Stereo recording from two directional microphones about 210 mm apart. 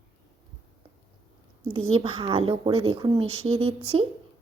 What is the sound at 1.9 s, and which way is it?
A woman's voice, 25° right (ahead or behind).